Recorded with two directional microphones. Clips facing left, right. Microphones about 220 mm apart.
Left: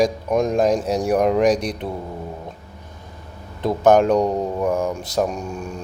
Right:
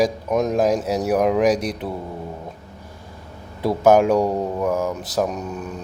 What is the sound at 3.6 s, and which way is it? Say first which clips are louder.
Speech: even; 10° right (ahead or behind).